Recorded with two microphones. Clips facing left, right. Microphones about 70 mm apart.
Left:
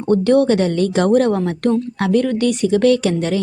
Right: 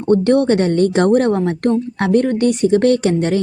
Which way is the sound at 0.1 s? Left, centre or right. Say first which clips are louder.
Right 1 dB; right.